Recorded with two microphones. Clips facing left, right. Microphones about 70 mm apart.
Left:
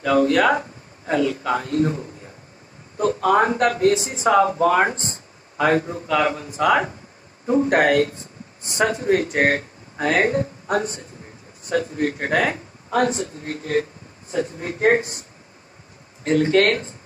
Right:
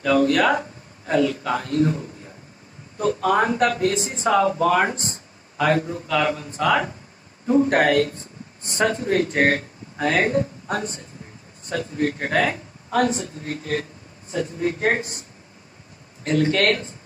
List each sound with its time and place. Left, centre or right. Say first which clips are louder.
0.0 s a man's voice: left 1 dB; left
16.3 s a man's voice: left 3 dB; left